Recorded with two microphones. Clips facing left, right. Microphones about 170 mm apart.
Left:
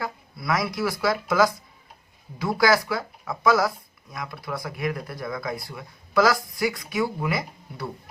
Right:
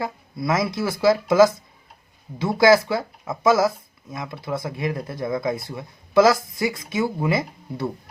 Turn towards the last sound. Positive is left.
turn(degrees=-25)  # may be behind; listen again after turning